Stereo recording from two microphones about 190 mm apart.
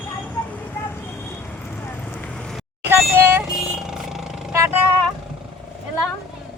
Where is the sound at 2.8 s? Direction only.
10° right (ahead or behind).